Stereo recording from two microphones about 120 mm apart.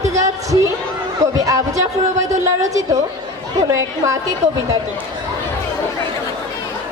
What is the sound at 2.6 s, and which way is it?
A woman's voice, 30° right (ahead or behind).